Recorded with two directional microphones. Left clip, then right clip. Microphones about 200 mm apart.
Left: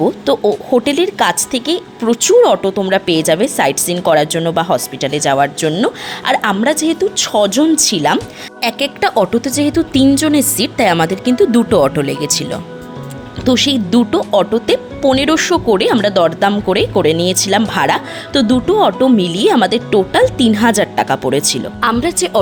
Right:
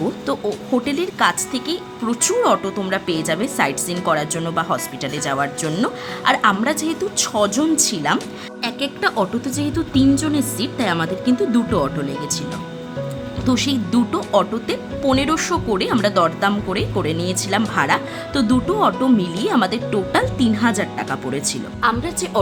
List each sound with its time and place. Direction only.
0.0 s a woman's voice: 30° left (ahead or behind)
13.4 s a woman's voice: 30° left (ahead or behind)